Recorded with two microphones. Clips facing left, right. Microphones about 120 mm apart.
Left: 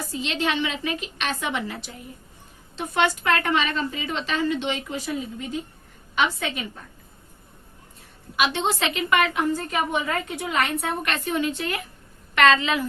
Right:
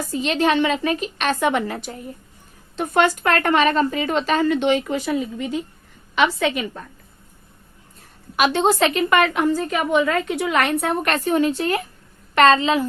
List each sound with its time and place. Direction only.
0.1 s a woman's voice: 45° right (ahead or behind); by 6.8 s 90° right
8.4 s speech: 45° right (ahead or behind)
9.3 s a woman's voice: 90° right; by 10.9 s 70° right (ahead or behind)
11.0 s a woman's voice: 40° right (ahead or behind)